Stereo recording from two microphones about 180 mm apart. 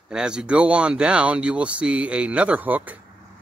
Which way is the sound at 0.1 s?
5° right (ahead or behind).